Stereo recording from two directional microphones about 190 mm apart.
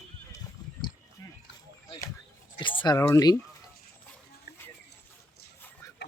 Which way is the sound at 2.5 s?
25° left (ahead or behind).